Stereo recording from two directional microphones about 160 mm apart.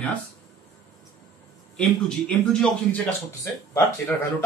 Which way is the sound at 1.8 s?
5° left (ahead or behind).